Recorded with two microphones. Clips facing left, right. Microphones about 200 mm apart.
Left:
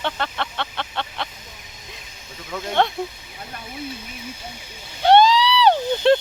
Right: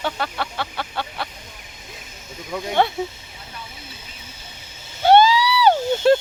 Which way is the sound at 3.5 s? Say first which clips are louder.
Even; 55° left (ahead or behind).